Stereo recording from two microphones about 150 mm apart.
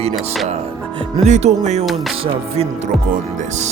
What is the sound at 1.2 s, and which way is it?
Music, 45° right (ahead or behind).